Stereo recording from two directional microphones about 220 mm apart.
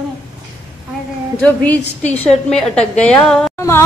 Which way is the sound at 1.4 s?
5° left (ahead or behind).